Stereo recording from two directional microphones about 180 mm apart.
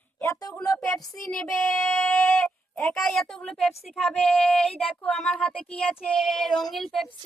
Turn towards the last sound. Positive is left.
turn(degrees=0)  # may be behind; listen again after turning